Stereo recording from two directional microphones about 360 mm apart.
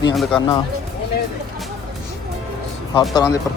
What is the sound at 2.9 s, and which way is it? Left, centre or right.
Speech, centre.